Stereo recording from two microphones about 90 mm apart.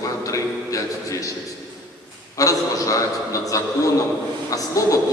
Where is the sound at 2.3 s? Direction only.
40° left (ahead or behind).